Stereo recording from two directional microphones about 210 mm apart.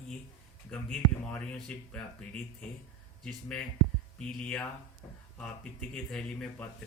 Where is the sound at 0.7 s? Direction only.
5° left (ahead or behind).